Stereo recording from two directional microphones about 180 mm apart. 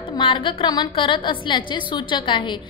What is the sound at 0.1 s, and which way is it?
A woman's voice, 25° left (ahead or behind).